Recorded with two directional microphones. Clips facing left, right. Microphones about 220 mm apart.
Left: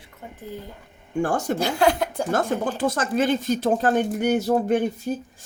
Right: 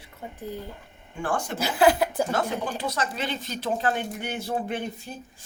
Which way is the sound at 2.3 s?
50° left (ahead or behind).